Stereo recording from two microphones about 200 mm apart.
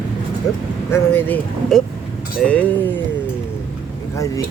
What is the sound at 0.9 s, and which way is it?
Speech, 10° left (ahead or behind).